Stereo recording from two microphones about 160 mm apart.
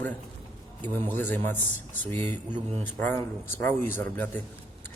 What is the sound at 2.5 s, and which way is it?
Speech, 45° right (ahead or behind).